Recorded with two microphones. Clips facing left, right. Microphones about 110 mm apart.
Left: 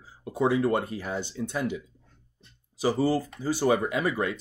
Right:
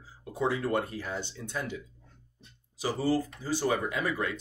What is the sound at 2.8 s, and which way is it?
Speech, 15° left (ahead or behind).